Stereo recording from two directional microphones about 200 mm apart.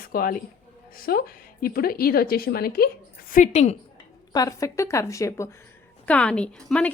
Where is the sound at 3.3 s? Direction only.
35° left (ahead or behind).